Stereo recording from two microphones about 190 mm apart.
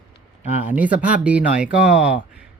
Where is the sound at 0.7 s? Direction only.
10° right (ahead or behind).